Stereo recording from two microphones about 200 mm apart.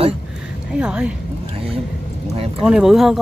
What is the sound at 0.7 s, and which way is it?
Speech, 5° right (ahead or behind).